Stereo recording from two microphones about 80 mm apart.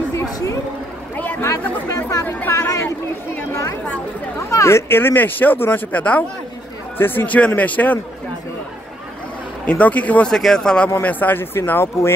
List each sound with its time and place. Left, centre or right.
0.1 s a sound: left
1.1 s a sound: left
2.0 s chatter: left
4.5 s speech: left; by 8.0 s centre
9.7 s speech: centre
10.3 s speech: centre
11.0 s speech: left